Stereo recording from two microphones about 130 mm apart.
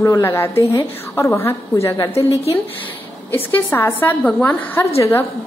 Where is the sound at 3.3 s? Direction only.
15° left (ahead or behind).